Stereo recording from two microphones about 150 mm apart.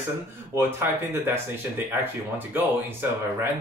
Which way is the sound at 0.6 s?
15° right (ahead or behind).